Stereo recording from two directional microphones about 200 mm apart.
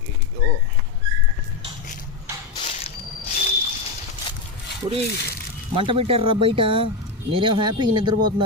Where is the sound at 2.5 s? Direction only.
30° left (ahead or behind).